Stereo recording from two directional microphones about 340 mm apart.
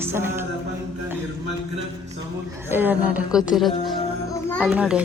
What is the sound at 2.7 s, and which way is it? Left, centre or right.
Speech, centre.